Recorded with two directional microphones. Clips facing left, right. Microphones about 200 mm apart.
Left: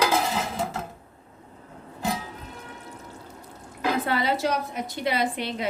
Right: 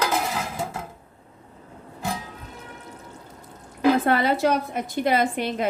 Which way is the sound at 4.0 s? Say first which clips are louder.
Right 4 dB; 50° right (ahead or behind).